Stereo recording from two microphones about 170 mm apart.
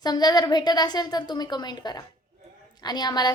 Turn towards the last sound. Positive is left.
turn(degrees=25)  # may be behind; listen again after turning